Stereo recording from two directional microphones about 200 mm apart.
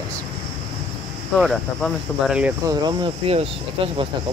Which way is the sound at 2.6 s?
20° right (ahead or behind).